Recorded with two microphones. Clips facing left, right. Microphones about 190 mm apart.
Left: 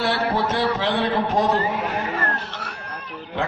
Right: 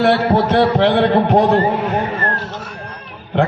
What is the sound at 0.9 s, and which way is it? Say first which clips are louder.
A man's voice: right 8 dB; 65° right (ahead or behind).